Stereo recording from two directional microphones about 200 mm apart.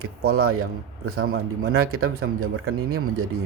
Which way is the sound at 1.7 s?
90° right.